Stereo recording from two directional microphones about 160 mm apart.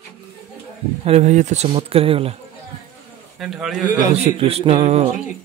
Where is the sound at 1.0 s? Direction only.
45° right (ahead or behind).